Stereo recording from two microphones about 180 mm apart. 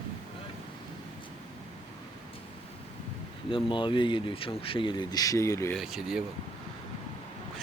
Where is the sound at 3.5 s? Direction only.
30° left (ahead or behind).